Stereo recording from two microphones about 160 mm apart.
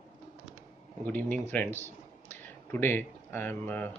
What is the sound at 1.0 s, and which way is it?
Speech, 10° left (ahead or behind).